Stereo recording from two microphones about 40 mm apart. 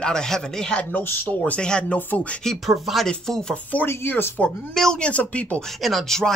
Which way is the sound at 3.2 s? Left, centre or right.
Centre.